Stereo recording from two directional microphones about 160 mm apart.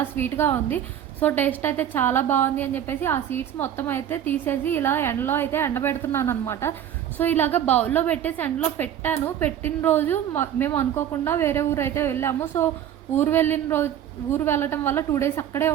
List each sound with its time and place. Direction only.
0.0 s a woman's voice: 15° left (ahead or behind)